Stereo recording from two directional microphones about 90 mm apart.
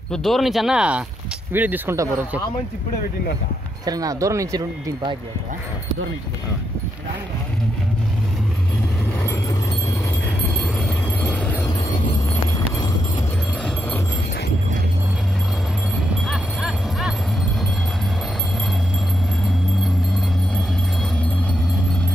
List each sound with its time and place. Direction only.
0.1 s speech: centre (ahead or behind); by 2.0 s 20° right (ahead or behind)
3.8 s speech: 45° right (ahead or behind)
10.6 s a sound: 10° left (ahead or behind)
12.5 s vehicle: 40° left (ahead or behind)
16.3 s music: 5° right (ahead or behind)